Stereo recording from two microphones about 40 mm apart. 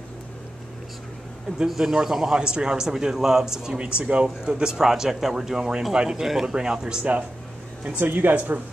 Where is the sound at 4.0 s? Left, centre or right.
Right.